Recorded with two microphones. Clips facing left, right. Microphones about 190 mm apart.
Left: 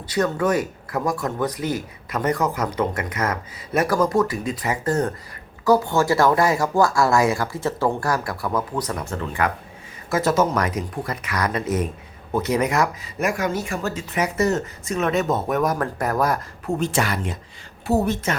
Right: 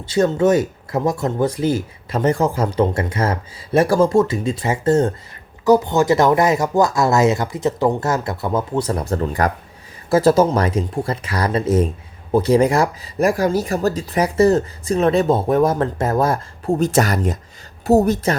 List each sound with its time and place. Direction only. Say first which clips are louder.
0.0 s speech: right 6 dB; 25° right (ahead or behind)